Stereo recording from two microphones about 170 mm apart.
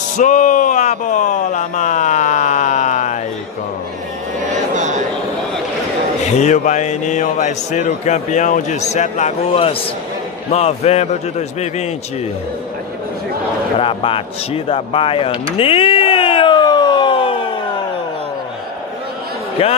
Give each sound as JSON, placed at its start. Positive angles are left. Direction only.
{"t": 0.2, "sound": "speech", "side_deg": 50}
{"t": 4.4, "sound": "a sound", "side_deg": -45}
{"t": 6.4, "sound": "a man's voice", "side_deg": 45}
{"t": 13.7, "sound": "speech", "side_deg": 30}
{"t": 19.6, "sound": "a man's voice", "side_deg": 35}